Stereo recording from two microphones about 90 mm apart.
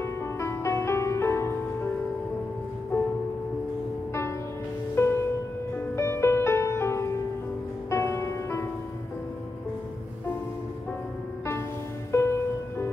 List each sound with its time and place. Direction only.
0.0 s music: 30° left (ahead or behind)
4.9 s music: 25° left (ahead or behind)
12.1 s music: 30° left (ahead or behind)